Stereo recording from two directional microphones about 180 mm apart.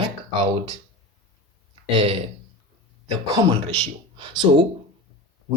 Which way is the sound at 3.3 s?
25° right (ahead or behind).